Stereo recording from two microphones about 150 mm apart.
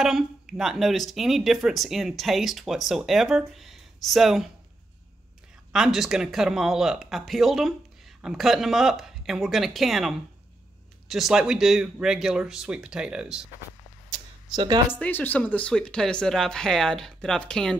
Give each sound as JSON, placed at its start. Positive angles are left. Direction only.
{"t": 0.0, "sound": "speech", "side_deg": -5}
{"t": 5.7, "sound": "speech", "side_deg": -5}
{"t": 14.1, "sound": "a sound", "side_deg": -30}
{"t": 14.9, "sound": "speech", "side_deg": 15}